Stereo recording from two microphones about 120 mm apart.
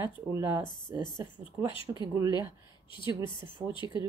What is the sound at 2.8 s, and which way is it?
Speech, 45° left (ahead or behind).